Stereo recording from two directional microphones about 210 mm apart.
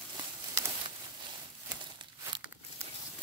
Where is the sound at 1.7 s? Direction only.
20° right (ahead or behind).